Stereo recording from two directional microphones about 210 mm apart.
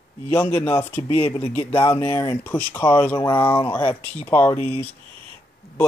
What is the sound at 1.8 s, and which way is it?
Speech, 10° left (ahead or behind).